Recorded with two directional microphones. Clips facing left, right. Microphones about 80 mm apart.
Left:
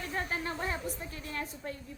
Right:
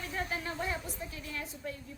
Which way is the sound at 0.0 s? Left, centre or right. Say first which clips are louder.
Left 2 dB; left.